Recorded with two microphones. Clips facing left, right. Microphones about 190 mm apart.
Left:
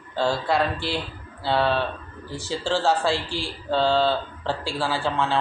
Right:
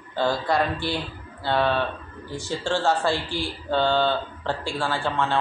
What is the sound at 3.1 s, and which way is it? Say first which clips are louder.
Speech: even; 30° left (ahead or behind).